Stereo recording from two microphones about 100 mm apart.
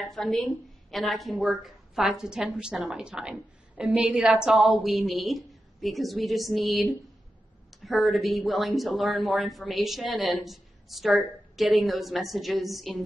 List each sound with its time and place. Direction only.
0.0 s a woman's voice: 5° left (ahead or behind)